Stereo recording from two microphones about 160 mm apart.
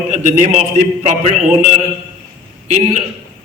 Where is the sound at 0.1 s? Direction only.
50° right (ahead or behind).